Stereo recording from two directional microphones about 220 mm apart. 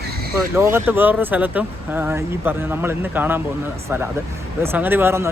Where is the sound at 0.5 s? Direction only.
10° right (ahead or behind).